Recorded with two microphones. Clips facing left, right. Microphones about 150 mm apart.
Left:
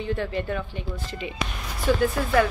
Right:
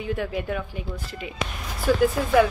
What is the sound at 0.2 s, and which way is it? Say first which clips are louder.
Speech: even; 5° right (ahead or behind).